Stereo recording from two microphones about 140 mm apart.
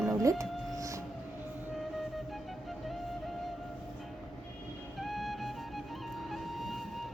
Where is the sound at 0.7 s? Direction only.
25° right (ahead or behind).